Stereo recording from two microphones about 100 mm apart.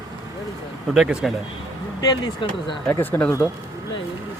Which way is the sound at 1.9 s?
50° left (ahead or behind).